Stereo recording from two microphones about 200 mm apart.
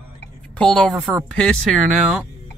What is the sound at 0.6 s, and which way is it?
Speech, 5° left (ahead or behind).